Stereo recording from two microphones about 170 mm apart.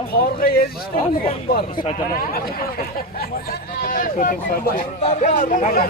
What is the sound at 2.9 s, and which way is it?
Speech, 60° left (ahead or behind).